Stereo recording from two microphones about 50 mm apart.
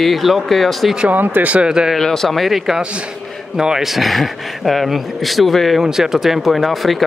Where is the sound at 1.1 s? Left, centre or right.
Right.